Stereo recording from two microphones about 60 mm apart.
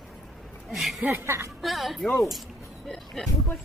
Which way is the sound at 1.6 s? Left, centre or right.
Centre.